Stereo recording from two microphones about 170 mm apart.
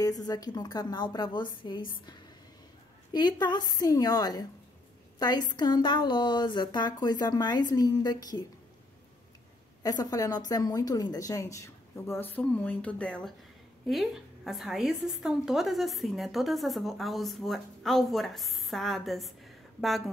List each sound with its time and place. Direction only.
0.0 s a woman's voice: 20° left (ahead or behind)
9.8 s a woman's voice: 20° left (ahead or behind); by 20.0 s centre (ahead or behind)